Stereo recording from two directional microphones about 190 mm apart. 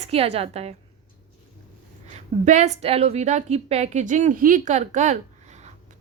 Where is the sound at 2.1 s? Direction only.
35° right (ahead or behind).